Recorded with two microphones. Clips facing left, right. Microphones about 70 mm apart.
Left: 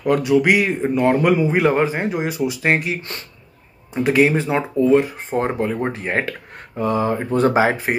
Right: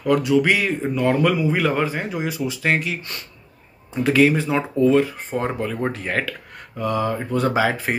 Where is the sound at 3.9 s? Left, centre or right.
Centre.